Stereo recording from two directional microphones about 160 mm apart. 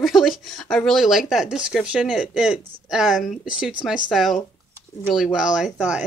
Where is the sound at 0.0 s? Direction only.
Centre (ahead or behind).